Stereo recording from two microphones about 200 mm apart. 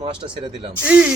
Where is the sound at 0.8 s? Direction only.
5° right (ahead or behind).